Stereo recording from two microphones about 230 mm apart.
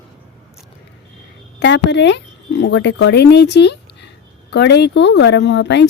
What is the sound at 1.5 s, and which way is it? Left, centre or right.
Speech, left.